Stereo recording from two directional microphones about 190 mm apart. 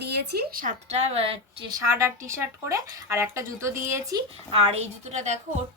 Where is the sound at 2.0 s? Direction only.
15° right (ahead or behind).